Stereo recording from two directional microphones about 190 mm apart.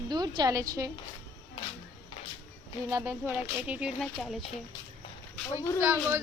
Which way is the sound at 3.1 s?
5° right (ahead or behind).